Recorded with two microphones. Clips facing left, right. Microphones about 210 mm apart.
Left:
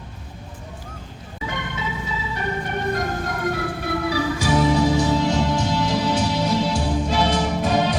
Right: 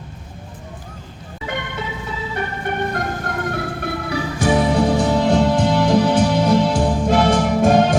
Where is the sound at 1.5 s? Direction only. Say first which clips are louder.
Right 5 dB; 60° right (ahead or behind).